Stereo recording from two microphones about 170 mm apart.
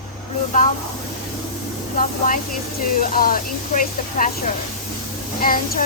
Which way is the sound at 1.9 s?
55° left (ahead or behind).